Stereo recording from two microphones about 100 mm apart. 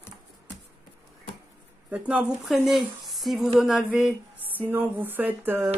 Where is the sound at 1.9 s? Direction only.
15° right (ahead or behind).